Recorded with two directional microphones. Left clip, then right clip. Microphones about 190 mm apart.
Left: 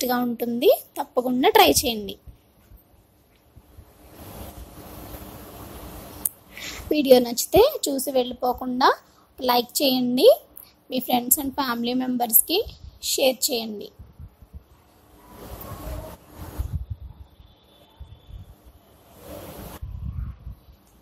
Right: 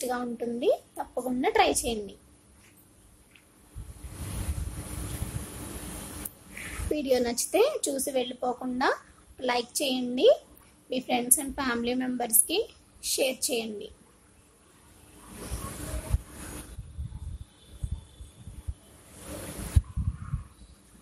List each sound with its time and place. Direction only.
0.0 s a woman's voice: 40° left (ahead or behind)
6.9 s a woman's voice: 30° left (ahead or behind)